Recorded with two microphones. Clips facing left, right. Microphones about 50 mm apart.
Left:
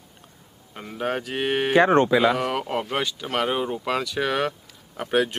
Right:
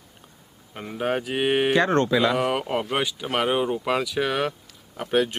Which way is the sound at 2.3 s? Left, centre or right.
Centre.